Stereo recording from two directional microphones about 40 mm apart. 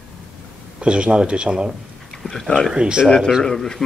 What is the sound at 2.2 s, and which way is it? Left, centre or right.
Speech, centre.